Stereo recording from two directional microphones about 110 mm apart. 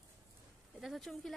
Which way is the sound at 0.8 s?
Centre (ahead or behind).